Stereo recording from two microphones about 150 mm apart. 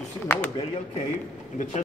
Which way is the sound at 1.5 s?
55° left (ahead or behind).